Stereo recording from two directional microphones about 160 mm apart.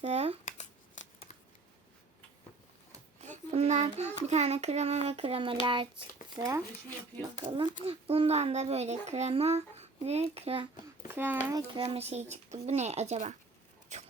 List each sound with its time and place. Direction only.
0.0 s a child's voice: 40° right (ahead or behind)
0.4 s scissors: 45° left (ahead or behind)
3.2 s child singing: 45° right (ahead or behind)
4.3 s a child's voice: 45° right (ahead or behind)
6.3 s speech: 20° right (ahead or behind)
7.4 s a child's voice: 30° right (ahead or behind)
11.1 s speech: 10° right (ahead or behind)
11.5 s speech: 30° right (ahead or behind)
13.9 s a sound: 45° right (ahead or behind)